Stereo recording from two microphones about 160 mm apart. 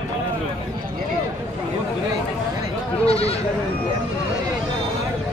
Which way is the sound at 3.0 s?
40° left (ahead or behind).